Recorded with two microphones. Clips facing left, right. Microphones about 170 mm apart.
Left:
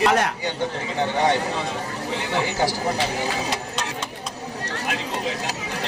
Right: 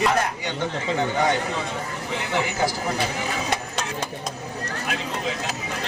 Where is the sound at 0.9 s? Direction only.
35° left (ahead or behind).